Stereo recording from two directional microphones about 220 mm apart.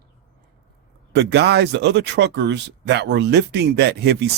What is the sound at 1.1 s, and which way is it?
Speech, 50° right (ahead or behind).